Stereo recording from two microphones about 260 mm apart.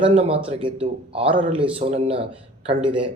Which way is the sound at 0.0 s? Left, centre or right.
Right.